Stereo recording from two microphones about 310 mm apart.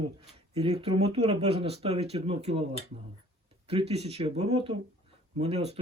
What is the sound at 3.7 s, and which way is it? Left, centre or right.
Speech, centre.